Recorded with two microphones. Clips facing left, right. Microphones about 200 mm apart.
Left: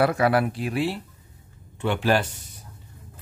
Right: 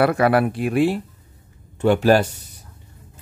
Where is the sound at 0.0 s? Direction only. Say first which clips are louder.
Right 4 dB; 60° right (ahead or behind).